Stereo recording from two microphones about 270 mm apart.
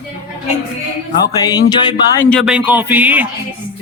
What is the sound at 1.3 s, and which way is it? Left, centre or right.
Speech, centre.